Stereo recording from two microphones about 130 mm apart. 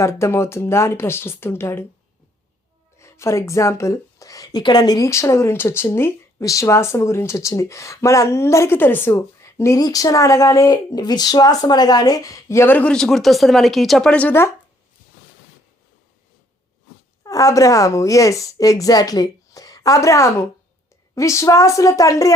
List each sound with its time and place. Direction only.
0.0 s a woman's voice: 20° left (ahead or behind)
3.0 s a woman's voice: 20° left (ahead or behind)
17.2 s a woman's voice: 25° left (ahead or behind)